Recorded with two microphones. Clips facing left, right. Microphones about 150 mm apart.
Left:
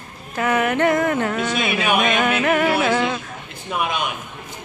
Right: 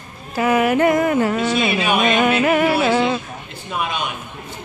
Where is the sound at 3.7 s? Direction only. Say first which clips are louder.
Left 1 dB; 10° left (ahead or behind).